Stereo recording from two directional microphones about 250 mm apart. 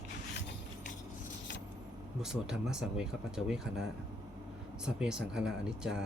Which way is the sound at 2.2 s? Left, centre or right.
Centre.